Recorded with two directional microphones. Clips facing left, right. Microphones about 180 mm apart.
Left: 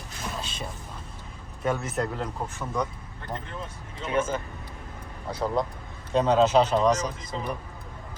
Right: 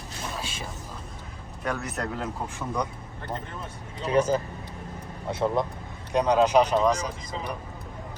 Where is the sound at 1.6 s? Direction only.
Centre (ahead or behind).